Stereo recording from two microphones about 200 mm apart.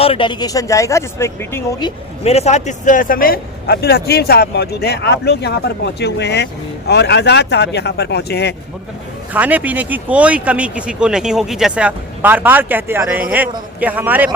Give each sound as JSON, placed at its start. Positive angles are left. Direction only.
{"t": 0.0, "sound": "speech", "side_deg": 25}
{"t": 2.2, "sound": "speech", "side_deg": 30}
{"t": 9.3, "sound": "speech", "side_deg": -10}